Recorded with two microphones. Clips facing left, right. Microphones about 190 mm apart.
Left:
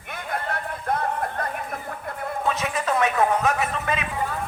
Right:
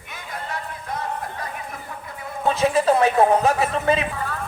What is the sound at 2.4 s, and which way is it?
Speech, 30° right (ahead or behind).